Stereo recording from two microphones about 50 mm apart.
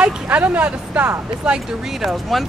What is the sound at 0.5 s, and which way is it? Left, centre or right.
Speech, right.